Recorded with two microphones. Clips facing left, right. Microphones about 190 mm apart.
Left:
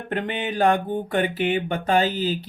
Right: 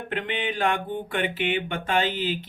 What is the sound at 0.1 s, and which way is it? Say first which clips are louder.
Mantra: left 3 dB; 40° left (ahead or behind).